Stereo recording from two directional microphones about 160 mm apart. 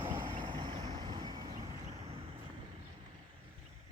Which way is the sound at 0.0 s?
30° right (ahead or behind).